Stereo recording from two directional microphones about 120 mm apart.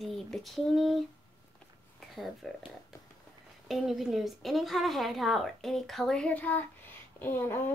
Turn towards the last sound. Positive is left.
turn(degrees=20)  # may be behind; listen again after turning